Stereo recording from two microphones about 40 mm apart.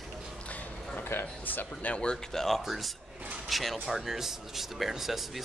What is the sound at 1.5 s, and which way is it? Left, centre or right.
Speech, left.